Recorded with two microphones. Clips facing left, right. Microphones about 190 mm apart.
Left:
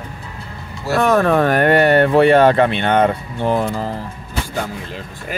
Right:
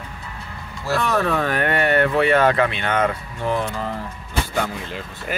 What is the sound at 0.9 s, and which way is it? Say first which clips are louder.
Speech: left 7 dB; 50° left (ahead or behind).